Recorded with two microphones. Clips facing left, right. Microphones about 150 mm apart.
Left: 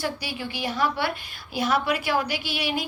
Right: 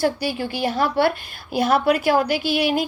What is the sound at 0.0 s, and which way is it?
A woman's voice, 45° right (ahead or behind).